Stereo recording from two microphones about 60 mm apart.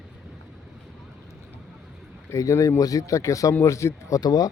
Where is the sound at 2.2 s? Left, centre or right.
Left.